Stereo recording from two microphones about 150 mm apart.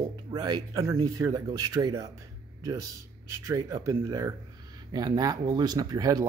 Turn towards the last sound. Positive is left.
turn(degrees=-25)  # may be behind; listen again after turning